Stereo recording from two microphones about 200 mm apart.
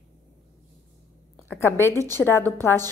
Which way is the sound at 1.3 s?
10° left (ahead or behind).